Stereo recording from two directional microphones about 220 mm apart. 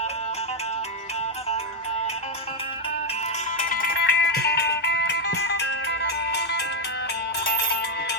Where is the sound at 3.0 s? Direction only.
30° left (ahead or behind).